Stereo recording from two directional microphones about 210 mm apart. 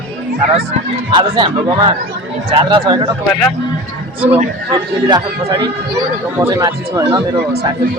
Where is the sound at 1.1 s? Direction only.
25° right (ahead or behind).